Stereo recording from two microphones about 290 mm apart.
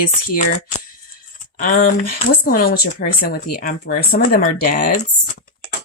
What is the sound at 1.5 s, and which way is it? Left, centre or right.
Speech, left.